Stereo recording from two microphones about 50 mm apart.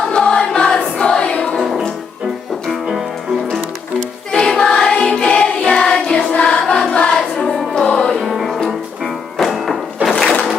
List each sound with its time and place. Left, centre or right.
0.1 s choir: centre
1.5 s music: centre
4.3 s music: centre
6.3 s choir: left
7.1 s music: centre
10.1 s a sound: centre